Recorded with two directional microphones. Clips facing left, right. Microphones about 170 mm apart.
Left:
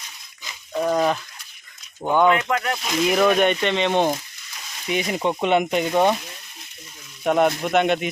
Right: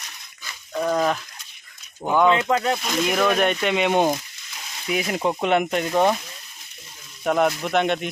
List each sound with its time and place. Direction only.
0.4 s a sound: 10° left (ahead or behind)
2.0 s speech: centre (ahead or behind)
2.5 s speech: 25° right (ahead or behind)
2.8 s speech: centre (ahead or behind)
7.3 s speech: centre (ahead or behind)